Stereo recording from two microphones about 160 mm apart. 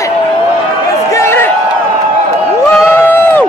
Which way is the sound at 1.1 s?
15° left (ahead or behind).